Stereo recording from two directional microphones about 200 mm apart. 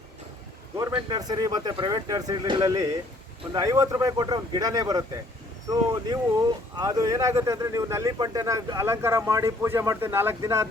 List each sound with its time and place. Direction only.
0.8 s speech: 20° right (ahead or behind)